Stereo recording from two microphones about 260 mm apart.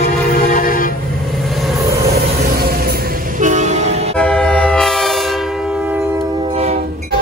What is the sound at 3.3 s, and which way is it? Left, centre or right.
Train, right.